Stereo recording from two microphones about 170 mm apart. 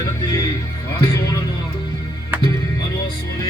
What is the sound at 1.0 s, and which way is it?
Speech, 20° left (ahead or behind).